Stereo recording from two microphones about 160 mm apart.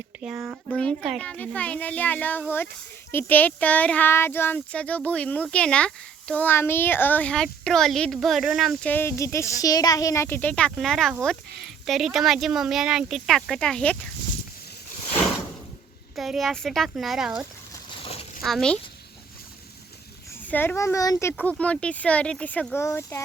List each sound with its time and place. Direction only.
0.2 s speech: 5° right (ahead or behind)
8.9 s speech: 15° left (ahead or behind)
16.1 s speech: centre (ahead or behind)
18.0 s a sound: 40° left (ahead or behind)
18.4 s speech: 5° left (ahead or behind)
20.5 s speech: 10° left (ahead or behind)